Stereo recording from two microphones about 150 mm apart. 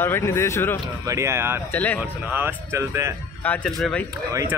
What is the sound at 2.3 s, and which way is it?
Speech, 10° right (ahead or behind).